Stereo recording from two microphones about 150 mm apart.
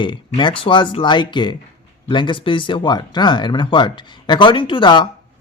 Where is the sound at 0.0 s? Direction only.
30° left (ahead or behind).